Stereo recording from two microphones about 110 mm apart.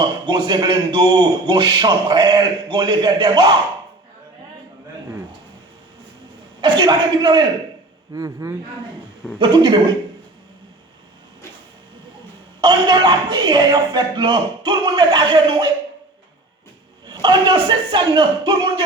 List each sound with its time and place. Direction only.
0.3 s a man's voice: 40° right (ahead or behind)
6.6 s a man's voice: 45° right (ahead or behind)
8.1 s a man's voice: 30° right (ahead or behind)
9.4 s a man's voice: 45° right (ahead or behind)
12.6 s a man's voice: 40° right (ahead or behind)
17.1 s a man's voice: 45° right (ahead or behind)